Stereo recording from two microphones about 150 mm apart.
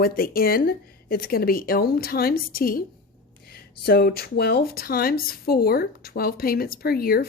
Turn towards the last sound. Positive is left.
turn(degrees=85)